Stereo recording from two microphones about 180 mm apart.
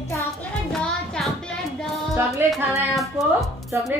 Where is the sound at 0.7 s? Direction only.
5° left (ahead or behind).